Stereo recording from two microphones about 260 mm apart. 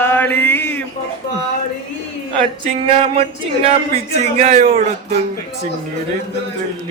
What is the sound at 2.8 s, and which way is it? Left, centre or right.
Speech, right.